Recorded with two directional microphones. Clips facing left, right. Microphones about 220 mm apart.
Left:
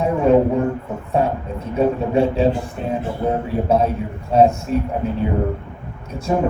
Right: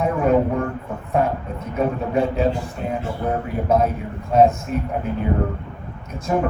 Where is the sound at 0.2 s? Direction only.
30° left (ahead or behind).